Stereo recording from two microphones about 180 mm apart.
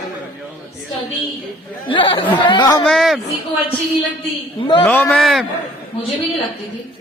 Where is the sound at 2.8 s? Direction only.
Centre (ahead or behind).